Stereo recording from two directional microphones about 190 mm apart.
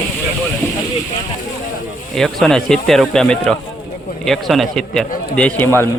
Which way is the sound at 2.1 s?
Centre (ahead or behind).